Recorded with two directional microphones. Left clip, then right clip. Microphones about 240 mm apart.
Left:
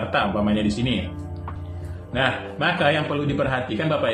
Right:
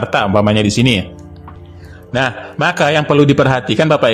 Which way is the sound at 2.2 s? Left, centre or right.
Right.